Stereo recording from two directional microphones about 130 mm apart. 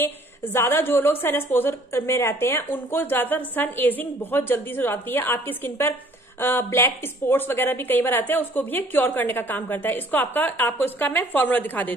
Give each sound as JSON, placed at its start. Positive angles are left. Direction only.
{"t": 0.0, "sound": "a woman's voice", "side_deg": 15}